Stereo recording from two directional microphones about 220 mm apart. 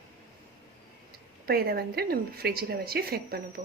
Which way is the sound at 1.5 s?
45° right (ahead or behind).